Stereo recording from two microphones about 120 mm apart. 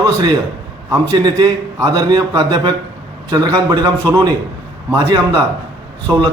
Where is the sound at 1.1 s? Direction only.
30° right (ahead or behind).